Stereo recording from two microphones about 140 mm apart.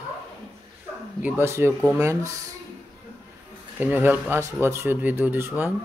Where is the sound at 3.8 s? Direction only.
15° right (ahead or behind).